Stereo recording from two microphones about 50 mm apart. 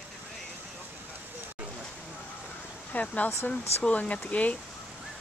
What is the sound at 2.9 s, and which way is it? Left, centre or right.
Speech, left.